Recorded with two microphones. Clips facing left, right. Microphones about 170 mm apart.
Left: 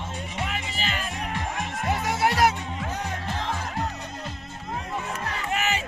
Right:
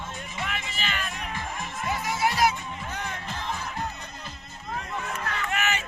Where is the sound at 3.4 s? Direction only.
85° left.